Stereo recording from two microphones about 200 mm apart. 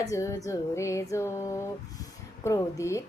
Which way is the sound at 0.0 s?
15° left (ahead or behind).